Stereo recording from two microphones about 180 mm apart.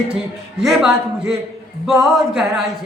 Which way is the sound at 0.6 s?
Centre (ahead or behind).